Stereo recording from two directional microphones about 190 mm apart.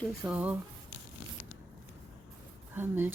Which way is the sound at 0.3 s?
5° right (ahead or behind).